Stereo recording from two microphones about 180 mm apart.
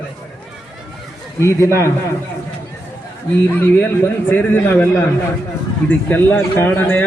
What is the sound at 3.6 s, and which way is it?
A man's voice, 15° left (ahead or behind).